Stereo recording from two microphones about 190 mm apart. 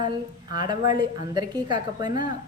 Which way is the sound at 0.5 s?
25° right (ahead or behind).